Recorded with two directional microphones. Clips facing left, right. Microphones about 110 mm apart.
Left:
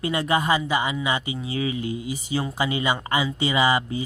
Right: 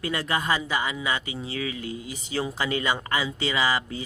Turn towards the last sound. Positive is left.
turn(degrees=20)  # may be behind; listen again after turning